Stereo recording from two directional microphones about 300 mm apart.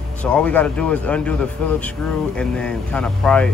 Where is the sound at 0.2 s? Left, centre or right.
Centre.